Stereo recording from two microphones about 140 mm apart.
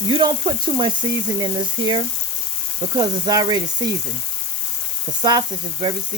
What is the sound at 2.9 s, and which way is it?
Speech, 25° right (ahead or behind).